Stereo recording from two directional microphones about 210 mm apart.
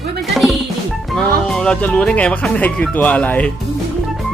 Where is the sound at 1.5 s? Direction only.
5° left (ahead or behind).